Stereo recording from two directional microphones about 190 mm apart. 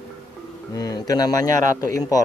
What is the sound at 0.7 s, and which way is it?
Speech, 20° left (ahead or behind).